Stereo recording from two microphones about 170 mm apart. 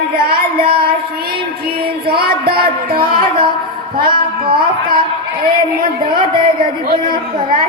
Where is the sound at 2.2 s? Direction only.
65° right (ahead or behind).